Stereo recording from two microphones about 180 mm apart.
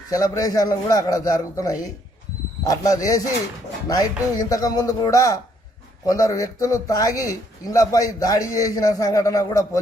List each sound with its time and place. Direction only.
0.1 s speech: 20° left (ahead or behind)